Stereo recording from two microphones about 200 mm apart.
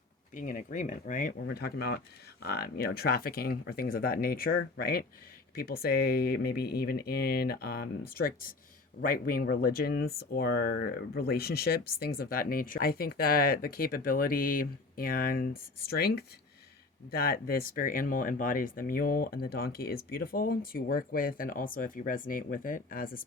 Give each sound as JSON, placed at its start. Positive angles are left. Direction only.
{"t": 0.3, "sound": "speech", "side_deg": 40}